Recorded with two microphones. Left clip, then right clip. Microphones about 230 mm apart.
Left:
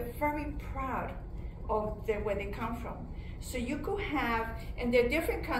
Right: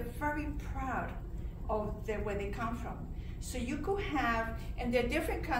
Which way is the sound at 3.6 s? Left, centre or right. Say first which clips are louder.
Even; right.